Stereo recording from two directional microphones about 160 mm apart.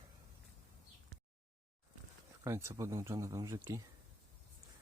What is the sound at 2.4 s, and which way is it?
Speech, 15° right (ahead or behind).